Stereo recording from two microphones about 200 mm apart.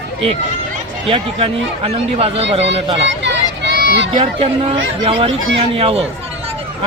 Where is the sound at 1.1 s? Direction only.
30° right (ahead or behind).